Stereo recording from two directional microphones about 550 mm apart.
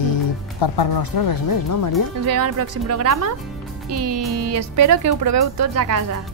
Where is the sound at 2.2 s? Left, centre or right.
Right.